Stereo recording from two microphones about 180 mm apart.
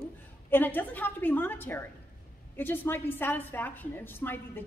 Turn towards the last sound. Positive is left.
turn(degrees=10)  # may be behind; listen again after turning